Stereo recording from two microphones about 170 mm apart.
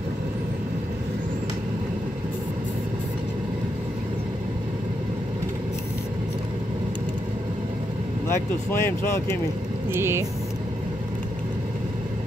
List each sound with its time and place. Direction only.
8.3 s speech: 15° left (ahead or behind)
9.9 s speech: 15° right (ahead or behind)